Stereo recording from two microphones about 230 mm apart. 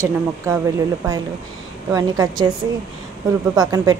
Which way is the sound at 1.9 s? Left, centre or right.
Centre.